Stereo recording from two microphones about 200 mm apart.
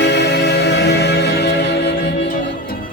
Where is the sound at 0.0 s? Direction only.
60° left (ahead or behind).